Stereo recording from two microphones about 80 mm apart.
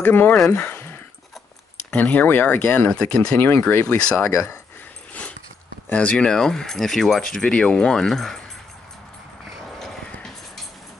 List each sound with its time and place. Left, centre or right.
0.0 s speech: left
0.7 s a sound: left
1.9 s speech: centre
3.3 s speech: left
3.8 s speech: centre
4.3 s speech: left
5.9 s speech: centre
9.8 s horse: centre